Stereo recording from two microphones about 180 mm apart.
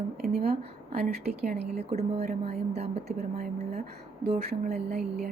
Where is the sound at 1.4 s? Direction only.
60° right (ahead or behind).